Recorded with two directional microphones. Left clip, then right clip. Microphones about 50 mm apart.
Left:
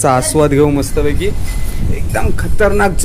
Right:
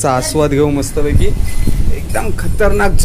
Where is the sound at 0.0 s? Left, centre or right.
Left.